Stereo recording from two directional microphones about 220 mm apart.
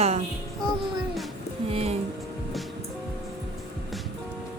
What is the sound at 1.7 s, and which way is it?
Speech, 25° right (ahead or behind).